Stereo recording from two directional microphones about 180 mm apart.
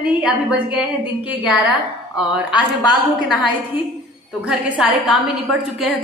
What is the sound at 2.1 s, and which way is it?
Speech, 25° left (ahead or behind).